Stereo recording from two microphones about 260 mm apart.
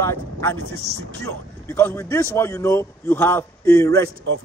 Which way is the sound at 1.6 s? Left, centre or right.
Centre.